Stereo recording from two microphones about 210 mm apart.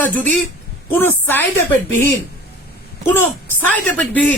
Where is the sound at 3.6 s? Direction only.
5° left (ahead or behind).